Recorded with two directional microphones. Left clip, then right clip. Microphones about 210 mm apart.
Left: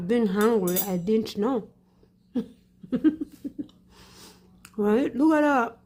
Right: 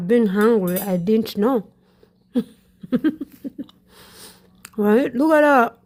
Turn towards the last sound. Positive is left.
turn(degrees=-35)  # may be behind; listen again after turning